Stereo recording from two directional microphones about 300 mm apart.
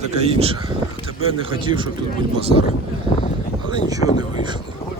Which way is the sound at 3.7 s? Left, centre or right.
Centre.